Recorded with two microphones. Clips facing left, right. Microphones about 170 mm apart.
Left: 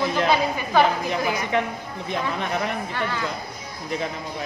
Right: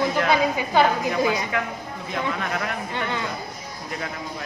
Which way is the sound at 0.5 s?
15° right (ahead or behind).